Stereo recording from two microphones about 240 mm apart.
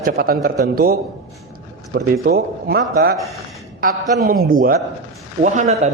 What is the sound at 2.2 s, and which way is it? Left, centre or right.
Speech, right.